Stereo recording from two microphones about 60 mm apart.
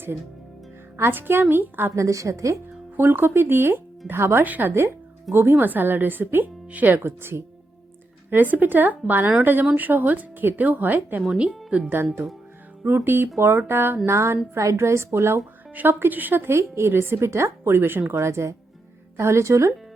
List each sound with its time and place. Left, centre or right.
0.9 s speech: right
2.0 s a woman's voice: right
3.0 s speech: right
4.4 s a woman's voice: right
5.3 s speech: right
8.3 s speech: right
11.3 s speech: centre
12.8 s a woman's voice: right
15.7 s a woman's voice: right